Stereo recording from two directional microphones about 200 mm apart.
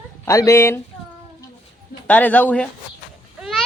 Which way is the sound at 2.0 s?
5° left (ahead or behind).